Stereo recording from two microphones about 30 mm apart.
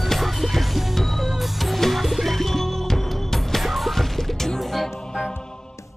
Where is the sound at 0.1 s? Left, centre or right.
Centre.